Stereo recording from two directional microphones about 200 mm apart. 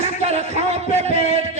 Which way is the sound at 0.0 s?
35° right (ahead or behind).